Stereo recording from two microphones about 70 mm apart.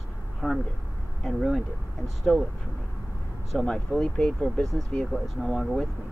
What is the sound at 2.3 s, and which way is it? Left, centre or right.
Speech, centre.